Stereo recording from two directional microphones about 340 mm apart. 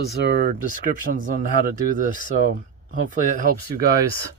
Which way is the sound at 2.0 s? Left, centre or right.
Left.